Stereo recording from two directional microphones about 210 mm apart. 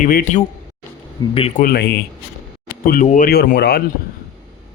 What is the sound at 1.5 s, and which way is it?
Speech, 45° left (ahead or behind).